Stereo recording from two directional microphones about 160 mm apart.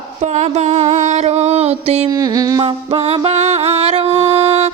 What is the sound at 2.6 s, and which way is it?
Music, 35° right (ahead or behind).